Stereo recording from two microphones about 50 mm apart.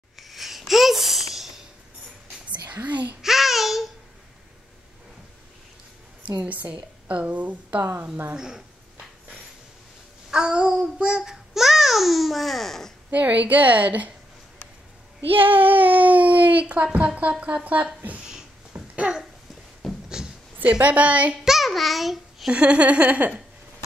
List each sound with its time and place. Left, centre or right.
0.2 s a sound: centre
2.7 s a child's voice: right
3.2 s child singing: centre
6.4 s a woman's voice: right
8.4 s speech: centre
10.3 s a sound: centre
10.8 s speech: right; by 12.9 s centre
13.1 s speech: right
15.5 s a woman's voice: right
18.8 s babbling: centre
19.8 s a sound: centre
20.8 s a woman's voice: right
21.5 s babbling: centre
22.5 s a woman's voice: right